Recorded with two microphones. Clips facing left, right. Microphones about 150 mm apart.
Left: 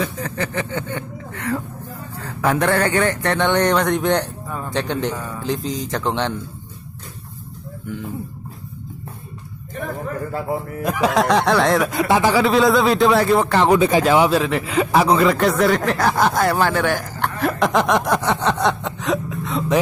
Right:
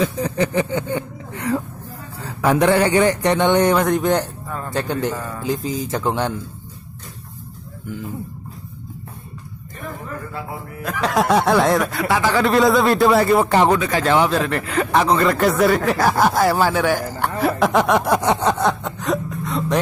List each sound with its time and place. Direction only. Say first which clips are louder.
0.0 s speech: right 5 dB; 15° right (ahead or behind)
10.8 s speech: left 3 dB; 15° left (ahead or behind)
11.1 s speech: right 1 dB; centre (ahead or behind)
11.9 s speech: left 3 dB; 20° left (ahead or behind)
12.4 s speech: right 3 dB; centre (ahead or behind)
13.7 s speech: left 5 dB; 20° left (ahead or behind)
14.0 s speech: left 2 dB; 10° left (ahead or behind); by 17.3 s 10° right (ahead or behind)
17.4 s a sound: right 1 dB; 10° right (ahead or behind)